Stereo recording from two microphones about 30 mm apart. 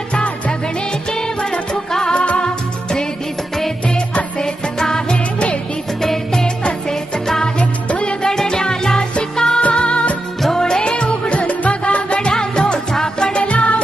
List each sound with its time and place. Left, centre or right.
0.1 s music: left
1.9 s music: centre
2.1 s music: left
3.8 s music: left
4.4 s music: left
7.6 s music: left
8.2 s music: left
9.6 s music: left
10.5 s music: left
12.3 s music: left
13.4 s music: left